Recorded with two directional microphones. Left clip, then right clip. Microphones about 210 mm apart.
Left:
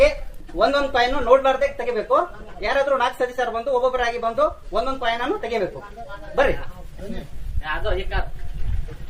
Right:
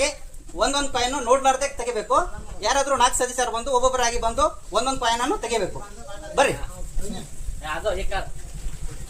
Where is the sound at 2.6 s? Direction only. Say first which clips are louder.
Even; 35° right (ahead or behind).